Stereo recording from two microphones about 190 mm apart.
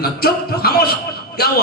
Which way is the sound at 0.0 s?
55° left (ahead or behind).